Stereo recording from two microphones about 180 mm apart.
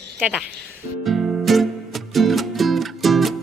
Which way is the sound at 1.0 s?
Centre (ahead or behind).